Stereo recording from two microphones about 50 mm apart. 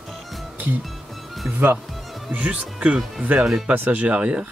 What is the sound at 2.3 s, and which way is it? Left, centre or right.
Speech, right.